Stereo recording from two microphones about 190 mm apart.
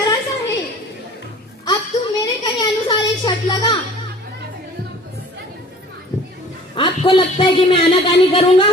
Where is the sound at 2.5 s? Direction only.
25° left (ahead or behind).